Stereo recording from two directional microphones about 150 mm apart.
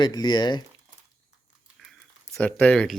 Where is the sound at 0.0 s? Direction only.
30° left (ahead or behind).